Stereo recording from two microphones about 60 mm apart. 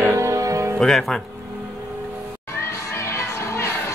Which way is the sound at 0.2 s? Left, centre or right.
Right.